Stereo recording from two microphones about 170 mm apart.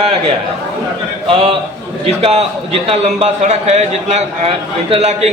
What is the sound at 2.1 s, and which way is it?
A man's voice, 35° right (ahead or behind).